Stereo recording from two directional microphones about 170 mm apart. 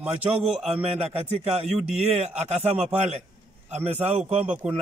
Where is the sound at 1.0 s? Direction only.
40° right (ahead or behind).